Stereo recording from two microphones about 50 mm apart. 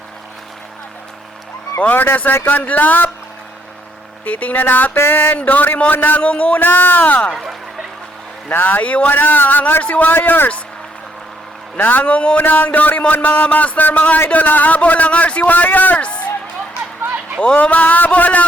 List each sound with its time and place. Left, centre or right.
1.8 s a man's voice: left
4.3 s a man's voice: left
4.9 s a sound: left
5.4 s a man's voice: left
8.4 s a man's voice: left
9.1 s a man's voice: left
10.2 s a sound: left
11.8 s a man's voice: left
17.4 s a man's voice: left